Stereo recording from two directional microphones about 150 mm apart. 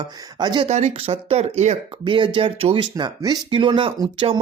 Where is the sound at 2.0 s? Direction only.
35° right (ahead or behind).